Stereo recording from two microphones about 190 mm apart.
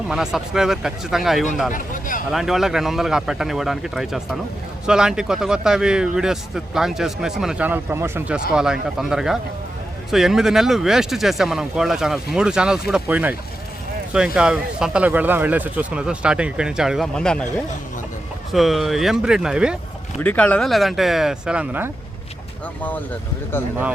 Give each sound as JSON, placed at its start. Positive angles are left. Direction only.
{"t": 0.1, "sound": "a man's voice", "side_deg": -5}
{"t": 1.7, "sound": "speech", "side_deg": 45}
{"t": 2.3, "sound": "a man's voice", "side_deg": 0}
{"t": 14.3, "sound": "a man's voice", "side_deg": -5}
{"t": 18.5, "sound": "a man's voice", "side_deg": 0}
{"t": 20.2, "sound": "a man's voice", "side_deg": 5}